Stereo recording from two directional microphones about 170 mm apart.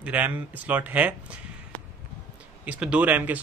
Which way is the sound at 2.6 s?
5° right (ahead or behind).